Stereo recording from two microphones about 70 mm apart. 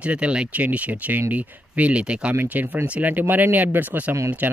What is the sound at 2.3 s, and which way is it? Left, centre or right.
Speech, right.